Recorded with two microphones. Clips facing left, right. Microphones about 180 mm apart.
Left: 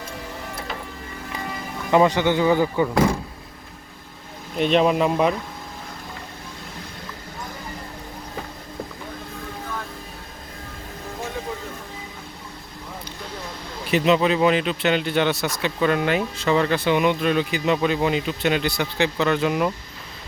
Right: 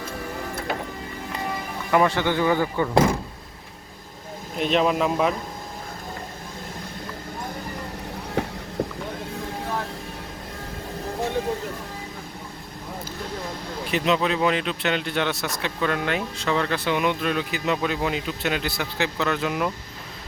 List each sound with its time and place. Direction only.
1.9 s speech: 20° left (ahead or behind)
4.5 s speech: centre (ahead or behind)
8.4 s a sound: 75° right (ahead or behind)
13.9 s speech: centre (ahead or behind)